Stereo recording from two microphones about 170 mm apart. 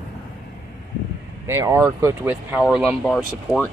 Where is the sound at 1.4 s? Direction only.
15° right (ahead or behind); by 3.7 s 5° left (ahead or behind).